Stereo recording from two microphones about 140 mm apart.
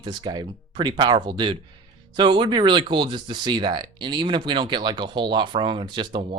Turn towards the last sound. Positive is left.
turn(degrees=-40)  # may be behind; listen again after turning